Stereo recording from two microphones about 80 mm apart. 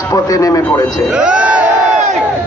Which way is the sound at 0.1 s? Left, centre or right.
Left.